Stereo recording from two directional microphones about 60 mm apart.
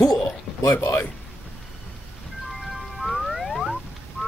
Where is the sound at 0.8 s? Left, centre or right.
Left.